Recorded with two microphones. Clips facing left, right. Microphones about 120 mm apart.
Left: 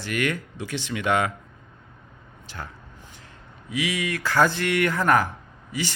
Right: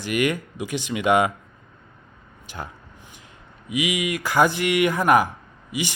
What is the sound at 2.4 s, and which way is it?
Speech, 15° right (ahead or behind).